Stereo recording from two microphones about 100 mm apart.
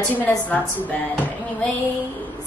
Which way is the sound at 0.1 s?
15° left (ahead or behind).